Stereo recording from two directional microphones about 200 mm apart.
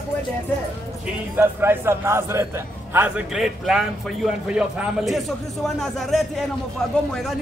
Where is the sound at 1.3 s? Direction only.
10° right (ahead or behind).